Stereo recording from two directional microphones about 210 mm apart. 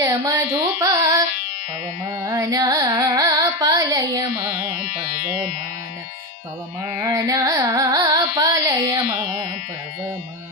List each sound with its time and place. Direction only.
0.0 s carnatic music: 15° right (ahead or behind)
2.2 s carnatic music: 15° right (ahead or behind)
4.9 s music: 45° left (ahead or behind)
7.0 s carnatic music: 15° right (ahead or behind)